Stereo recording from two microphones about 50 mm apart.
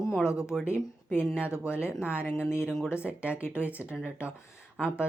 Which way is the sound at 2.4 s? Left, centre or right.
Left.